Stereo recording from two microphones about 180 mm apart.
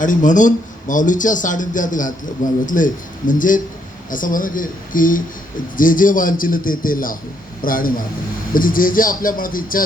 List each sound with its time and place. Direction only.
0.0 s speech: 45° left (ahead or behind)